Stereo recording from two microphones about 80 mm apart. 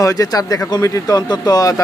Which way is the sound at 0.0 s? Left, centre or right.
Left.